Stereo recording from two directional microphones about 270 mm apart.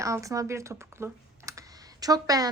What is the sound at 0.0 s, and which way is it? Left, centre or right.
Speech, centre.